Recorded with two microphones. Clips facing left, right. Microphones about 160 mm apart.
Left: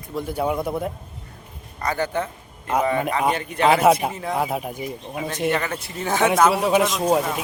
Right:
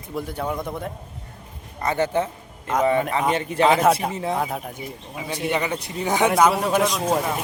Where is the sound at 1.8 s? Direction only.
25° right (ahead or behind).